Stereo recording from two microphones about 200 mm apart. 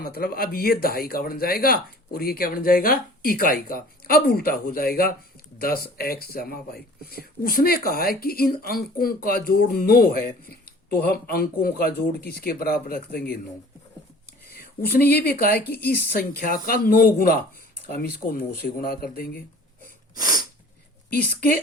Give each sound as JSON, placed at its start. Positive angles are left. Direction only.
{"t": 0.0, "sound": "speech", "side_deg": 50}
{"t": 14.8, "sound": "speech", "side_deg": 50}
{"t": 20.1, "sound": "sneeze", "side_deg": -20}